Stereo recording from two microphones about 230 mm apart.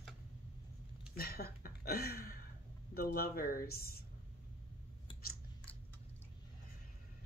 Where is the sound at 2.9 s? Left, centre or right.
Left.